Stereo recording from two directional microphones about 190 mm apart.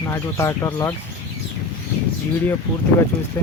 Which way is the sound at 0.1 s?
15° left (ahead or behind).